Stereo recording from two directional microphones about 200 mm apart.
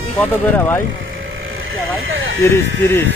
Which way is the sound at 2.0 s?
80° right.